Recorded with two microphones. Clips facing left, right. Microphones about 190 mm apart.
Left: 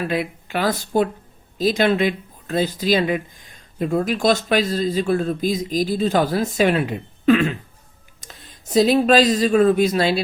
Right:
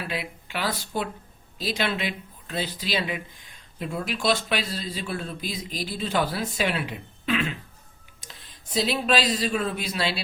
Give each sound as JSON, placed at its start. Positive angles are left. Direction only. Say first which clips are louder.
{"t": 0.1, "sound": "speech", "louder": "left 9 dB", "side_deg": 45}